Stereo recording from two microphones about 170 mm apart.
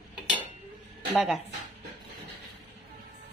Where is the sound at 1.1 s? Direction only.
Centre (ahead or behind).